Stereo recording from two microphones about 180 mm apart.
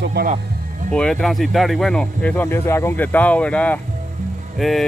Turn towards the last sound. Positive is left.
turn(degrees=0)  # may be behind; listen again after turning